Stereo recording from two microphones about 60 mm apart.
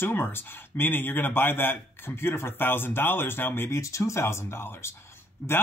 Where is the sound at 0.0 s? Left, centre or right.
Left.